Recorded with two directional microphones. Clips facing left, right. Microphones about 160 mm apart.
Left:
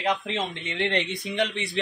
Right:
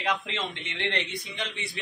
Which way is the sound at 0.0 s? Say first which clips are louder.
Left 3 dB; 20° left (ahead or behind).